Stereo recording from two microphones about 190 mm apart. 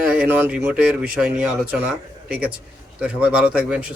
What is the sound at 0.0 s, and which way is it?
Speech, 5° right (ahead or behind).